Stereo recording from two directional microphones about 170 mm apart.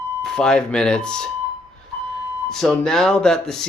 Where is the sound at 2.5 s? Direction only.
5° left (ahead or behind).